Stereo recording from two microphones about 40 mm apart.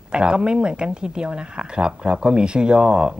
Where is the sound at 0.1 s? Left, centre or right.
Right.